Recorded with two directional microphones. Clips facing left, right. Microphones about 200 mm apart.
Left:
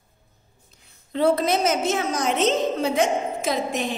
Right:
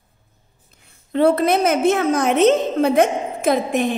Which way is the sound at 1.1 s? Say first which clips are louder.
Right 4 dB; 60° right (ahead or behind).